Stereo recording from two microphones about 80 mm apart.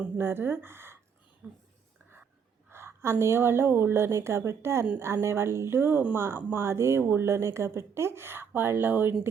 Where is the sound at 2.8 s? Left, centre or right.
Right.